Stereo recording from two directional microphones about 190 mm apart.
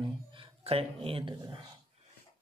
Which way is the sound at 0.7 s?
30° right (ahead or behind).